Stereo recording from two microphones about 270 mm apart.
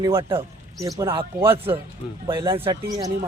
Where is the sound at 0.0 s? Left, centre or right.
Centre.